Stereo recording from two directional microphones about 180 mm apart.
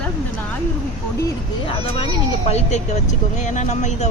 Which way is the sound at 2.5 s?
40° left (ahead or behind).